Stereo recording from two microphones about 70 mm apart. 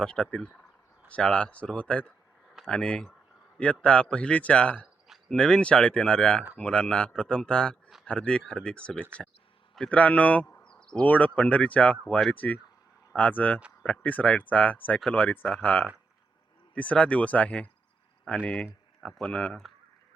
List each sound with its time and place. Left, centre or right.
0.0 s a man's voice: centre
10.6 s insect: centre
11.0 s a man's voice: left; by 19.7 s centre